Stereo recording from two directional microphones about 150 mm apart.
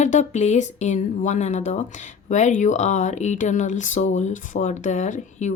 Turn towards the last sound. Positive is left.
turn(degrees=55)  # may be behind; listen again after turning